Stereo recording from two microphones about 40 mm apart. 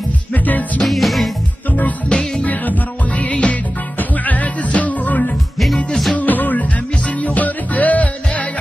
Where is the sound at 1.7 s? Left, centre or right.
Left.